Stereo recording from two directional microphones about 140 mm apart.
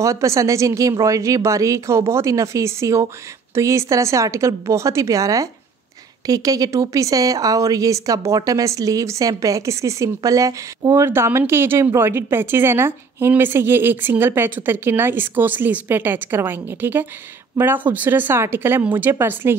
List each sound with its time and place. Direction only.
0.0 s speech: 20° right (ahead or behind)